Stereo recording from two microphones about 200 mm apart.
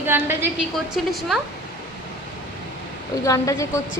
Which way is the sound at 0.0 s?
10° right (ahead or behind).